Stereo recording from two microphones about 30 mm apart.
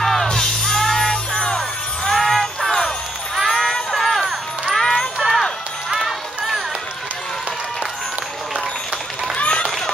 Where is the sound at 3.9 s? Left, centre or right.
Centre.